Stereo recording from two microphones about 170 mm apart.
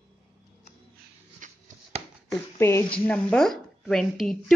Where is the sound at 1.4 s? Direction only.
50° right (ahead or behind).